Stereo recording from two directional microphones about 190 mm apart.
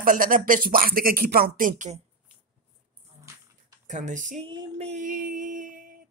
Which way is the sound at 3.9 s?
40° right (ahead or behind).